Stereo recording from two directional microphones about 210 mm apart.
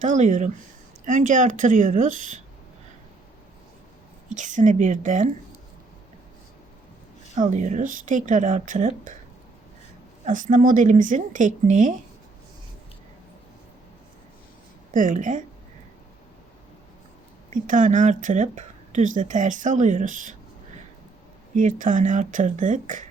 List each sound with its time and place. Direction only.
0.0 s speech: 35° right (ahead or behind)
4.3 s speech: 35° right (ahead or behind)
7.3 s speech: 35° right (ahead or behind)
10.2 s speech: 40° right (ahead or behind)
14.9 s speech: 35° right (ahead or behind)
17.5 s speech: 40° right (ahead or behind)
21.5 s speech: 35° right (ahead or behind)